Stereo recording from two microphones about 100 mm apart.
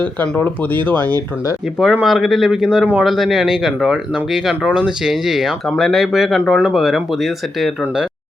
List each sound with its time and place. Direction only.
0.0 s speech: 20° left (ahead or behind)
1.8 s speech: 5° right (ahead or behind)